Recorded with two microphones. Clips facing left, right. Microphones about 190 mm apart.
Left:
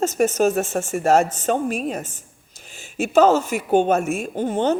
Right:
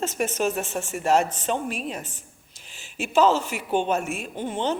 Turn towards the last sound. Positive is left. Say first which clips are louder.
# left 6 dB
turn(degrees=45)  # may be behind; listen again after turning